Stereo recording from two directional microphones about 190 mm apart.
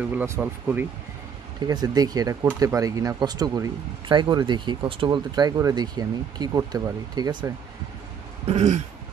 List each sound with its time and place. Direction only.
0.1 s speech: 10° right (ahead or behind)
1.7 s speech: 20° right (ahead or behind)
8.5 s throat clearing: 35° right (ahead or behind)